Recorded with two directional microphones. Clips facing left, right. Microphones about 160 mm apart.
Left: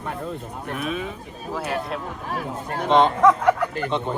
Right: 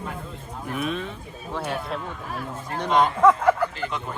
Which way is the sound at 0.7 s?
Centre (ahead or behind).